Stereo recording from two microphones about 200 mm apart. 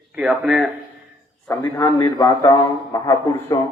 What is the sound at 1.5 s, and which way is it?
A man's voice, 15° left (ahead or behind).